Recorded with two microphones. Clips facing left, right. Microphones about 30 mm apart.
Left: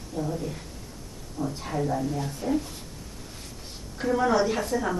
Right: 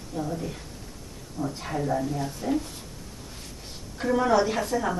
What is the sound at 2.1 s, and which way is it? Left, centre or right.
Speech, centre.